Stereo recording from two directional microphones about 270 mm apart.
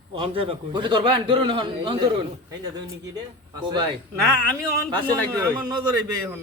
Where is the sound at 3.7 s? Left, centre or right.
Centre.